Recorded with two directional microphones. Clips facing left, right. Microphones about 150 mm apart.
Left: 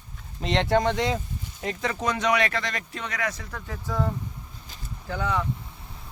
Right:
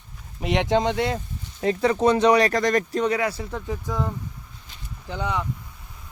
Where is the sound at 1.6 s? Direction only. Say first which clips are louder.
Right 9 dB; 35° right (ahead or behind).